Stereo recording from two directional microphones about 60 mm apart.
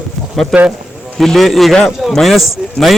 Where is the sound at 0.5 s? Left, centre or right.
Centre.